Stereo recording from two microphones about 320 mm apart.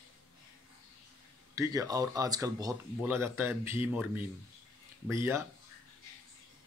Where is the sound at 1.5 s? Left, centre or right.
Centre.